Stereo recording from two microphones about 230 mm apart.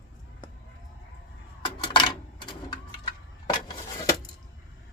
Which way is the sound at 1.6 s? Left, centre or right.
Centre.